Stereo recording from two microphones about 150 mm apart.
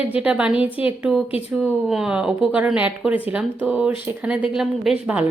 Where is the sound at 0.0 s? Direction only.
10° right (ahead or behind).